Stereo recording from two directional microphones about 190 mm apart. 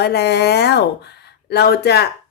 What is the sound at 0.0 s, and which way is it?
A woman's voice, 60° left (ahead or behind).